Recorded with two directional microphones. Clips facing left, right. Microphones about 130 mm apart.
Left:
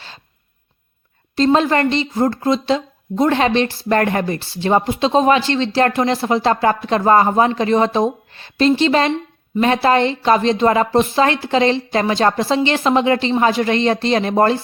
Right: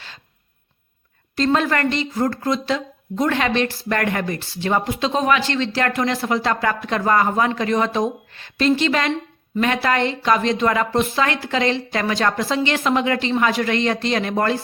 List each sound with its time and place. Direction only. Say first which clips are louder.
1.5 s a woman's voice: left 4 dB; 25° left (ahead or behind)